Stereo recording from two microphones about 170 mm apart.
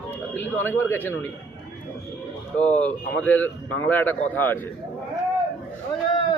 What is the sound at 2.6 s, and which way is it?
A man's voice, 10° left (ahead or behind).